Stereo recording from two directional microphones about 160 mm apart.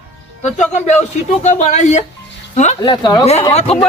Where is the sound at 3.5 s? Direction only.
40° left (ahead or behind).